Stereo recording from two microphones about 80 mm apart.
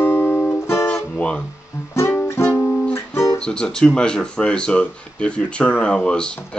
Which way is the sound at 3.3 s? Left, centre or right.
Centre.